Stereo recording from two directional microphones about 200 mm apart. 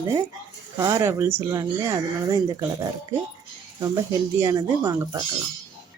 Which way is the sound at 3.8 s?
15° right (ahead or behind).